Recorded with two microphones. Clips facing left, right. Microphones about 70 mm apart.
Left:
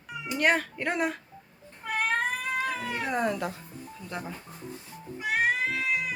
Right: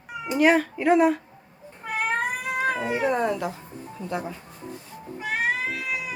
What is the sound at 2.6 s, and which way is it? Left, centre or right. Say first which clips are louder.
Cat: right 7 dB; right.